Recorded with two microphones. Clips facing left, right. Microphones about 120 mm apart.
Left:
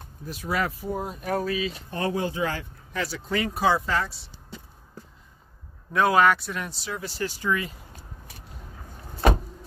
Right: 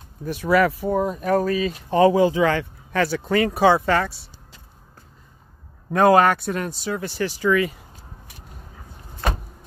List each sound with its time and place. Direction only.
0.2 s speech: 65° right (ahead or behind); by 1.7 s 45° right (ahead or behind)
1.9 s speech: 90° right
3.0 s speech: 60° right (ahead or behind)
5.9 s speech: 45° right (ahead or behind); by 7.7 s 90° right